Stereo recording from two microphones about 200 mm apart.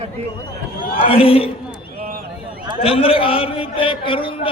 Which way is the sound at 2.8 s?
30° left (ahead or behind).